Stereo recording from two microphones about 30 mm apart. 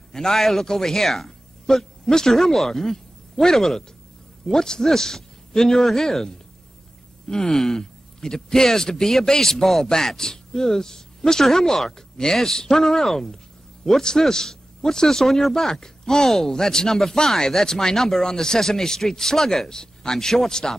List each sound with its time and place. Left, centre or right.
0.1 s speech: centre
1.7 s a man's voice: centre
2.3 s speech: centre
11.4 s speech: centre